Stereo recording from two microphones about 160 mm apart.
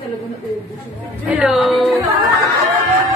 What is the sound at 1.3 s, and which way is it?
Speech, 5° right (ahead or behind).